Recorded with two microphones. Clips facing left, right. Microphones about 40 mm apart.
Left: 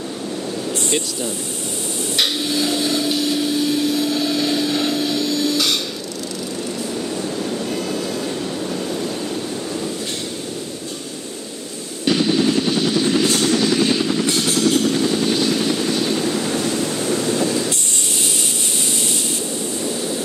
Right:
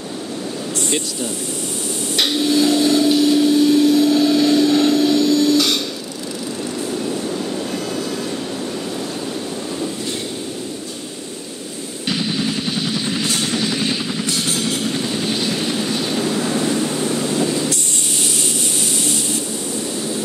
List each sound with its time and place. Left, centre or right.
2.1 s hammer: centre
12.1 s vehicle: centre
13.3 s vehicle: right
13.6 s vehicle: centre
14.4 s vehicle: centre